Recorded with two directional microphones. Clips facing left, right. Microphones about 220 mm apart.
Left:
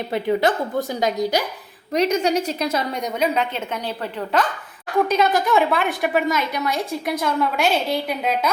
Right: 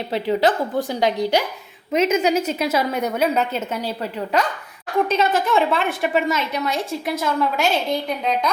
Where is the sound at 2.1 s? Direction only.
5° right (ahead or behind).